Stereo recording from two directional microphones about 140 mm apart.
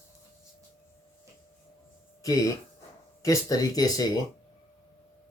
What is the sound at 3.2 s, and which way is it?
Speech, 25° left (ahead or behind).